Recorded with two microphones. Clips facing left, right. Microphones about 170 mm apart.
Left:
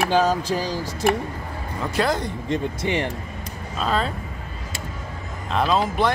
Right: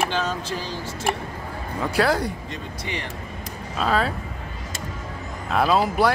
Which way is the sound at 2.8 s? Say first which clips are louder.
Left 8 dB; 50° left (ahead or behind).